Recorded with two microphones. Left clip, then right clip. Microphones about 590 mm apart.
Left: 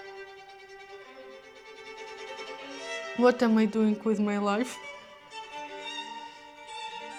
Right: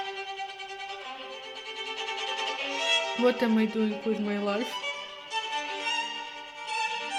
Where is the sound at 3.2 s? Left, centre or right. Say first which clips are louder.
Left 2 dB; left.